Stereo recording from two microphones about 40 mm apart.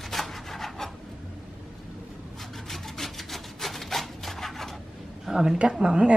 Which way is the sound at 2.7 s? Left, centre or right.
Centre.